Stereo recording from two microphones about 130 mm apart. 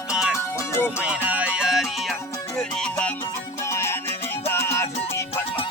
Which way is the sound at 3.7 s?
20° left (ahead or behind).